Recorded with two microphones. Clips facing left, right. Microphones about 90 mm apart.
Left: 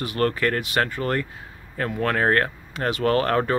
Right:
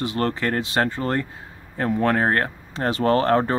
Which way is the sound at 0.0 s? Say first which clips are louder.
Left 1 dB; 25° right (ahead or behind).